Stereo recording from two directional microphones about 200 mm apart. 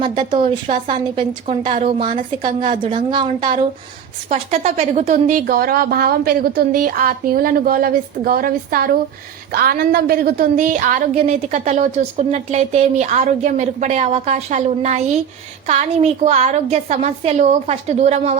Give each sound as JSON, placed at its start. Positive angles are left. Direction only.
{"t": 0.3, "sound": "a woman's voice", "side_deg": -40}
{"t": 11.1, "sound": "speech", "side_deg": -30}